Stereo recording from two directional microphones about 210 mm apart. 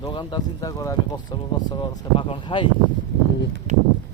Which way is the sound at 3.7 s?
35° right (ahead or behind).